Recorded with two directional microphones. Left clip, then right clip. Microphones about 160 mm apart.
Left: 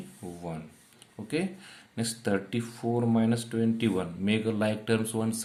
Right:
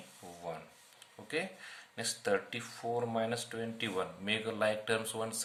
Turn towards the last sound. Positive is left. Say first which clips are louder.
# left 5 dB
turn(degrees=15)  # may be behind; listen again after turning